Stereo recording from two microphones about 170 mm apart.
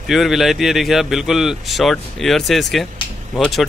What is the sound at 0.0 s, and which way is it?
Speech, centre (ahead or behind).